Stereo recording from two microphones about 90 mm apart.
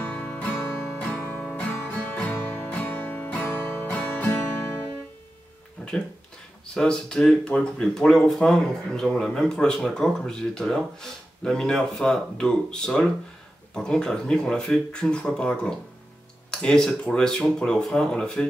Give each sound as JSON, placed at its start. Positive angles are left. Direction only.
{"t": 0.0, "sound": "music", "side_deg": 15}
{"t": 5.8, "sound": "a sound", "side_deg": 10}
{"t": 6.7, "sound": "speech", "side_deg": 10}